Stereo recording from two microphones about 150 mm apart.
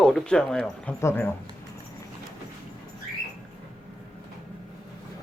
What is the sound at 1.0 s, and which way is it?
Speech, 15° left (ahead or behind).